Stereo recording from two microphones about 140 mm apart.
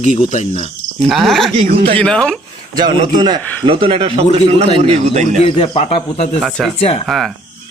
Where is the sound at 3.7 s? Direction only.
40° right (ahead or behind).